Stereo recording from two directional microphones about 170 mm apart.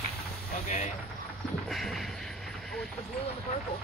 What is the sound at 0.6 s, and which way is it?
Speech, 45° left (ahead or behind).